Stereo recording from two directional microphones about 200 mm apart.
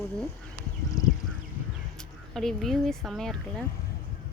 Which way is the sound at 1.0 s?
15° left (ahead or behind).